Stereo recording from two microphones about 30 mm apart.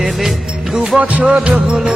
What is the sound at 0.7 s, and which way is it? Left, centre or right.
Music, centre.